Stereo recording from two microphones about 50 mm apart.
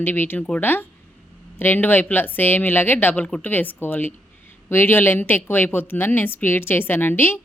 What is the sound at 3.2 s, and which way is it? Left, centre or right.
Speech, left.